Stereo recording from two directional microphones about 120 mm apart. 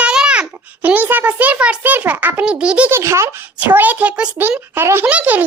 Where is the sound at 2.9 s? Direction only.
25° right (ahead or behind).